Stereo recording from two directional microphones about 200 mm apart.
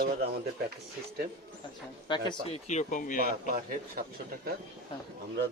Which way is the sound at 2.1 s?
20° left (ahead or behind).